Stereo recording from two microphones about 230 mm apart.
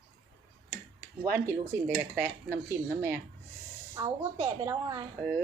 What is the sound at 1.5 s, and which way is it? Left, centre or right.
Speech, centre.